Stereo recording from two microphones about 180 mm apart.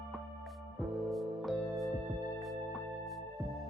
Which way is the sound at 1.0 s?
Centre (ahead or behind).